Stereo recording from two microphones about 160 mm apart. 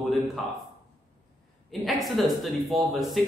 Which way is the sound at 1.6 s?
Centre (ahead or behind).